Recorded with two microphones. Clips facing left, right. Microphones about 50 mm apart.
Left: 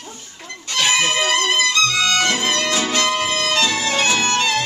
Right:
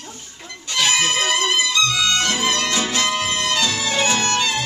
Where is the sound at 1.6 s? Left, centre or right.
Left.